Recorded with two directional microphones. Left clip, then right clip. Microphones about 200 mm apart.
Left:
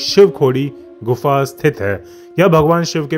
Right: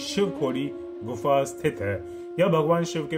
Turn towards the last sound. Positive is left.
turn(degrees=45)  # may be behind; listen again after turning